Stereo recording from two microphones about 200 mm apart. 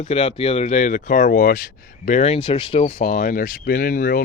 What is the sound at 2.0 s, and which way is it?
Speech, 35° left (ahead or behind).